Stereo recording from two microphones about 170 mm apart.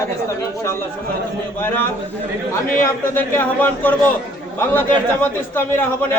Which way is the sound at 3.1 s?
15° left (ahead or behind).